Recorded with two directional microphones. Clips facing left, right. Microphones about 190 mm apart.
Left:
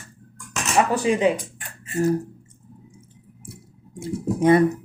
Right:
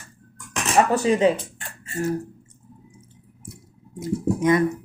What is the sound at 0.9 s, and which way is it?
Speech, 10° left (ahead or behind).